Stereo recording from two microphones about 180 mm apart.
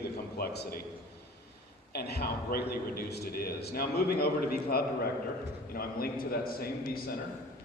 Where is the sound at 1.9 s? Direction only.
65° left (ahead or behind).